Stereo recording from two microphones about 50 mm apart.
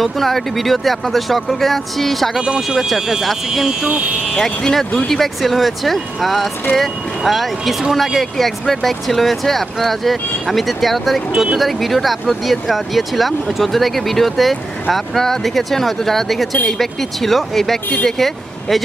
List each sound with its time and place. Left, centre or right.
0.0 s speech: centre
2.4 s speech: centre
2.9 s speech: centre